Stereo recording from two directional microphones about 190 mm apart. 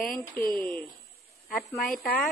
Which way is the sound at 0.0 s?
50° left (ahead or behind).